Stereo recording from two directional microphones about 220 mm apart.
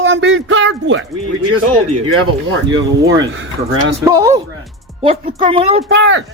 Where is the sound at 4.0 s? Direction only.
15° right (ahead or behind).